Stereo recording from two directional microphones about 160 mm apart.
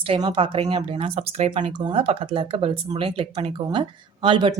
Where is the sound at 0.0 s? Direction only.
30° right (ahead or behind).